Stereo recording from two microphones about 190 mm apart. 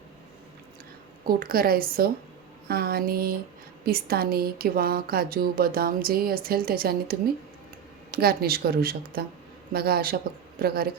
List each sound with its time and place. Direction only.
1.3 s speech: 50° right (ahead or behind)